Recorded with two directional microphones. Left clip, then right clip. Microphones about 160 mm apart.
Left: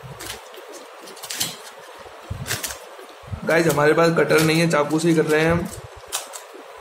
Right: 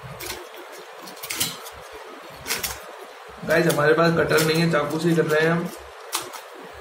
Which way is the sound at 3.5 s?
90° left.